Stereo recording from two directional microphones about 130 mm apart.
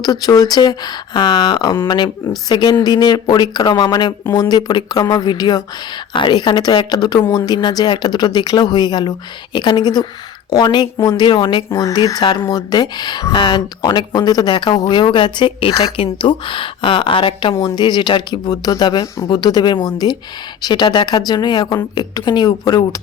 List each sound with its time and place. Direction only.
0.0 s speech: 30° left (ahead or behind)